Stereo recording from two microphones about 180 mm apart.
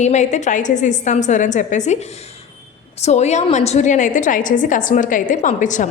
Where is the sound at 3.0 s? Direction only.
40° left (ahead or behind).